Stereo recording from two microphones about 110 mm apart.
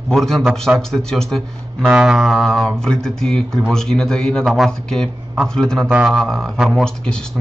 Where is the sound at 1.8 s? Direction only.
5° right (ahead or behind).